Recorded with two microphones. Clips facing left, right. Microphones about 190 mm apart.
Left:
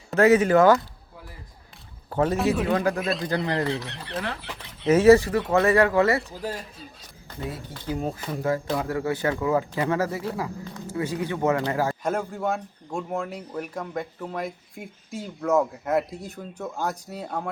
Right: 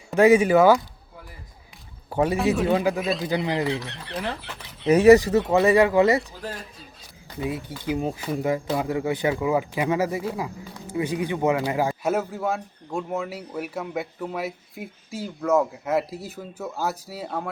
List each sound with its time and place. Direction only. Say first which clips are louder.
0.1 s speech: right 1 dB; 15° right (ahead or behind)
2.0 s speech: right 1 dB; 10° right (ahead or behind)
2.4 s speech: right 1 dB; centre (ahead or behind)
5.6 s speech: right 2 dB; 15° right (ahead or behind)
6.3 s speech: left 3 dB; centre (ahead or behind)
7.3 s speech: right 5 dB; 10° right (ahead or behind)